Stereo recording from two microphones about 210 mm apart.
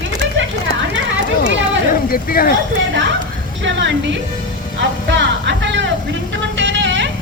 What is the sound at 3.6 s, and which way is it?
Music, 60° right (ahead or behind).